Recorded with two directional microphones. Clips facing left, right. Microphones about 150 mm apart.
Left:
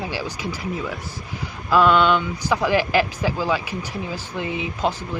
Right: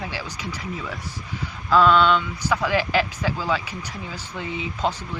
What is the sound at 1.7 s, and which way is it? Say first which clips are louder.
Speech: left 1 dB; 10° left (ahead or behind).